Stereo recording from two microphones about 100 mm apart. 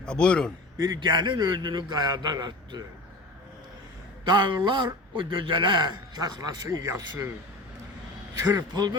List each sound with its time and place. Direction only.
0.0 s a man's voice: 10° left (ahead or behind)
0.8 s a man's voice: 45° right (ahead or behind)
4.3 s a man's voice: 50° right (ahead or behind)
6.2 s a man's voice: 40° right (ahead or behind)
6.7 s speech: 30° right (ahead or behind)
8.5 s a man's voice: 45° right (ahead or behind)